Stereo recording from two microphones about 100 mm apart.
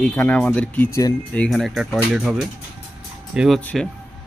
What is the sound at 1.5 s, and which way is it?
A man's voice, centre (ahead or behind).